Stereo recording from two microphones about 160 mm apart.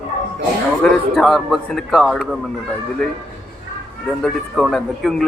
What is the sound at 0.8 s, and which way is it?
A man's voice, 5° left (ahead or behind).